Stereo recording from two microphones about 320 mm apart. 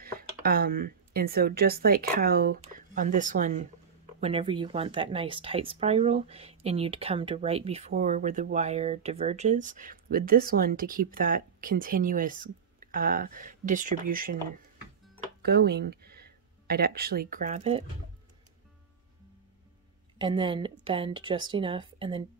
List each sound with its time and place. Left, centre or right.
0.0 s speech: right
15.4 s speech: right
20.2 s speech: centre